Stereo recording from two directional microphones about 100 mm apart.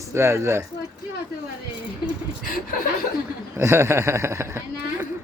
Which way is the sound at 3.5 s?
25° right (ahead or behind).